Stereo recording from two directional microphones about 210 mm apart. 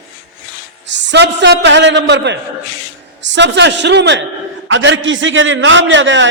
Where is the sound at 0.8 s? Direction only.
60° right (ahead or behind).